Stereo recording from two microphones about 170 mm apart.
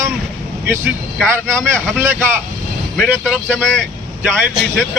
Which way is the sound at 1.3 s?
15° right (ahead or behind).